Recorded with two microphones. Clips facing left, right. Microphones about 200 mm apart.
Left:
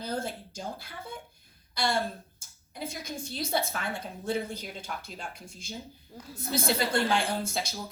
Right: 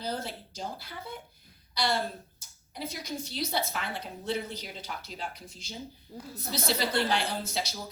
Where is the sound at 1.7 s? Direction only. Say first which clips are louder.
Even; 50° left (ahead or behind).